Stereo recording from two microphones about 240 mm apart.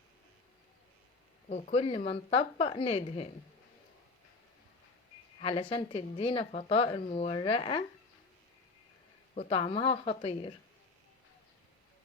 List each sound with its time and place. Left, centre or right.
1.5 s speech: left
5.4 s speech: left
9.3 s speech: left